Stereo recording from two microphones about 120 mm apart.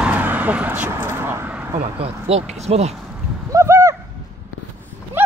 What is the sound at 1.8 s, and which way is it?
Speech, 55° right (ahead or behind).